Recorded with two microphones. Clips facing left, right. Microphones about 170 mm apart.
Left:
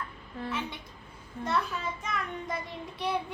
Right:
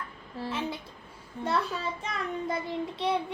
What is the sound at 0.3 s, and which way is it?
Child singing, 30° right (ahead or behind).